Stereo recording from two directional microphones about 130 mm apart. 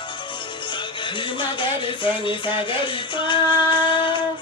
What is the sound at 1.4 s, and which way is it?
Music, 40° left (ahead or behind).